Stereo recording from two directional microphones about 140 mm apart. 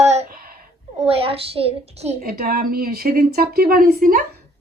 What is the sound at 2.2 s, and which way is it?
Speech, 90° right.